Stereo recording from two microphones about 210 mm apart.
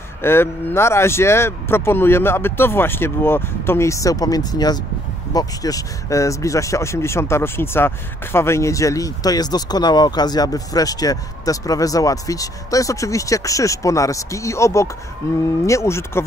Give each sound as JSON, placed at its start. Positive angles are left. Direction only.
{"t": 0.2, "sound": "speech", "side_deg": 10}